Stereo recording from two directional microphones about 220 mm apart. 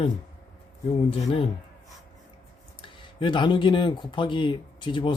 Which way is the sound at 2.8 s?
20° left (ahead or behind).